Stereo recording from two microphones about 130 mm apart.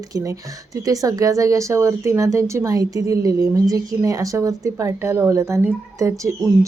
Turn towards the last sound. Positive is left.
turn(degrees=-25)  # may be behind; listen again after turning